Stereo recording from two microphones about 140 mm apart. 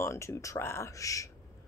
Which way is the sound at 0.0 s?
20° left (ahead or behind).